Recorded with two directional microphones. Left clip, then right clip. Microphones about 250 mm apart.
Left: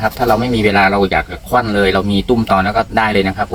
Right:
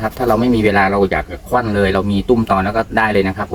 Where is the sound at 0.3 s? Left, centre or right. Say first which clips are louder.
Right 2 dB; centre.